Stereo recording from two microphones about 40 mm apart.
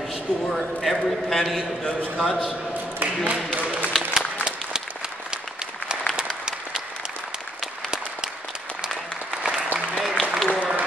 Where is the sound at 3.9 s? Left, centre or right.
Centre.